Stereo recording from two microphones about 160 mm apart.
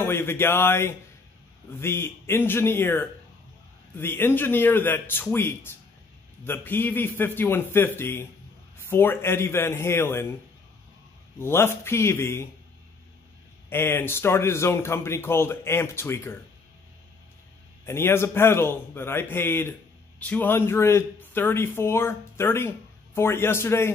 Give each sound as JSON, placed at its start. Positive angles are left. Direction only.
{"t": 0.0, "sound": "speech", "side_deg": 15}
{"t": 11.3, "sound": "speech", "side_deg": 15}
{"t": 13.7, "sound": "speech", "side_deg": 15}
{"t": 17.8, "sound": "speech", "side_deg": 15}